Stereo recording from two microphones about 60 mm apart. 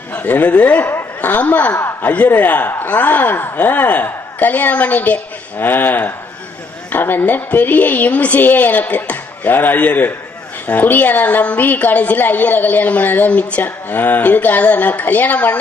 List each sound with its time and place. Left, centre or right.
0.2 s a woman's voice: left
0.9 s speech: left
1.7 s a man's voice: left
2.0 s a woman's voice: left